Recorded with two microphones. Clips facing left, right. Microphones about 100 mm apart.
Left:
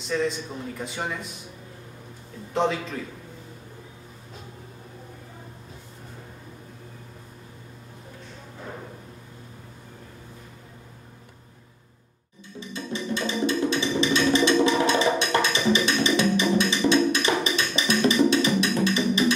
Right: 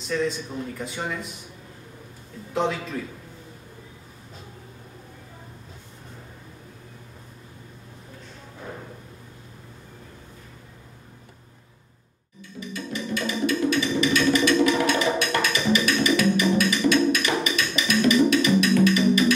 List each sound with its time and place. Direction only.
0.1 s a man's voice: 5° left (ahead or behind)
2.5 s a man's voice: centre (ahead or behind)
12.5 s music: 30° left (ahead or behind)